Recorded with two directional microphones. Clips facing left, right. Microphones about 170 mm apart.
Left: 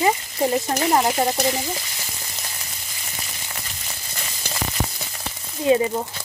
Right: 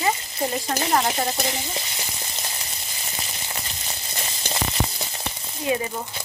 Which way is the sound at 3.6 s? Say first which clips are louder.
Right 2 dB; 25° right (ahead or behind).